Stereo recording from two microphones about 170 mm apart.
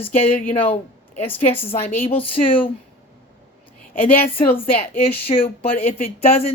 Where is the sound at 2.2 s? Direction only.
30° left (ahead or behind).